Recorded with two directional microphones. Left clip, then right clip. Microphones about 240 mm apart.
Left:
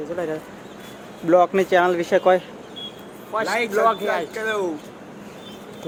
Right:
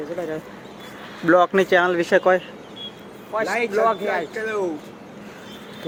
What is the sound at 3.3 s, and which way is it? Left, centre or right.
Speech, centre.